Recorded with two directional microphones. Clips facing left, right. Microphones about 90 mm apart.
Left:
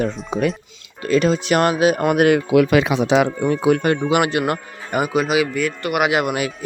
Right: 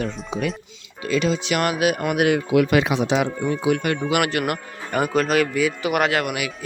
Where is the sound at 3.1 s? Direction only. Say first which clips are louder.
Left 5 dB; 70° left (ahead or behind).